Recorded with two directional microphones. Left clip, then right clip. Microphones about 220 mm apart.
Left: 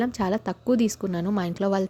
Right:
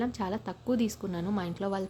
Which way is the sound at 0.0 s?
30° left (ahead or behind).